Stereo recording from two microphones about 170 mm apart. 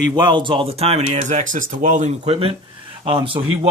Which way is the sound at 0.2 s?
25° right (ahead or behind).